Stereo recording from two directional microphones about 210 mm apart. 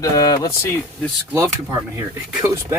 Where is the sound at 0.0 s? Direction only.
15° left (ahead or behind).